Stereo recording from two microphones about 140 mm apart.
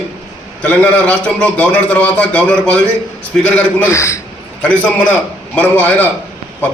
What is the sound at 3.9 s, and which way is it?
Speech, 20° left (ahead or behind).